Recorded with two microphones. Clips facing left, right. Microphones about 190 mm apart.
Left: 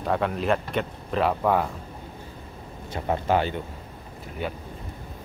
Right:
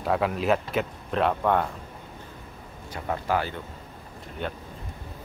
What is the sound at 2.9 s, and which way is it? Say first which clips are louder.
Speech: left 3 dB; 25° left (ahead or behind).